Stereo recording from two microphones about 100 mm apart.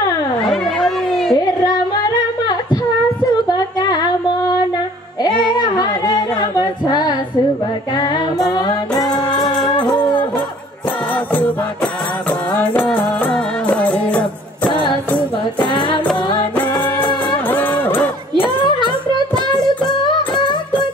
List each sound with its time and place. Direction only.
0.5 s a sound: centre (ahead or behind)
2.4 s humming: 45° left (ahead or behind)
3.4 s female singing: 45° left (ahead or behind)
5.2 s singing: 45° left (ahead or behind)
7.9 s music: 45° left (ahead or behind)
9.3 s music: 5° left (ahead or behind)
9.8 s music: 50° left (ahead or behind)
11.3 s music: 15° left (ahead or behind)
14.7 s music: 50° left (ahead or behind)
16.5 s music: 15° left (ahead or behind)
18.9 s music: 50° left (ahead or behind)